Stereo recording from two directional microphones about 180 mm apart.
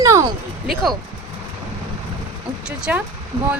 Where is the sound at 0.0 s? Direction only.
20° right (ahead or behind).